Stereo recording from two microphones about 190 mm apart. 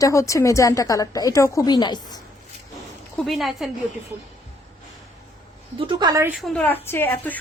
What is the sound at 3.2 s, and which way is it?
Speech, centre (ahead or behind).